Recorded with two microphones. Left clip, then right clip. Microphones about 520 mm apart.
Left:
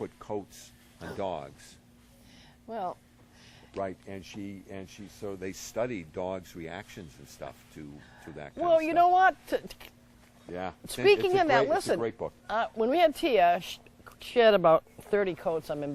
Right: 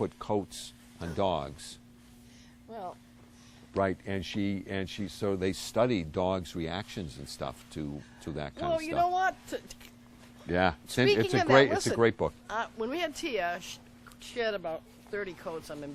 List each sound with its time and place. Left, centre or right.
0.0 s speech: right
2.6 s speech: left
3.8 s speech: right
8.7 s speech: left
10.5 s speech: right
11.0 s speech: left
11.9 s speech: right
12.5 s speech: left
15.2 s speech: left